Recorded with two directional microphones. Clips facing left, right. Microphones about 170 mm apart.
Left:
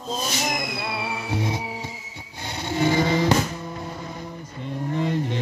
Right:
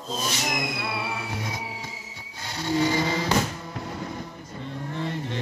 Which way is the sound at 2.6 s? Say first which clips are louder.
Left 2 dB; 20° left (ahead or behind).